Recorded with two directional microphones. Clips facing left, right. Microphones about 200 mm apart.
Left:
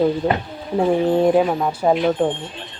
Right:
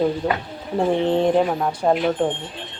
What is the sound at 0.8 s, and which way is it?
A woman's voice, 10° left (ahead or behind).